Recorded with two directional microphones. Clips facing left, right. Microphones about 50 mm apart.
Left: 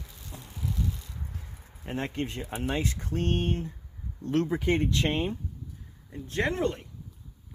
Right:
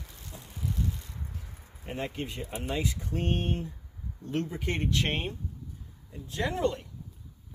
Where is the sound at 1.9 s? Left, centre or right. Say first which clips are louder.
Left 3 dB; left.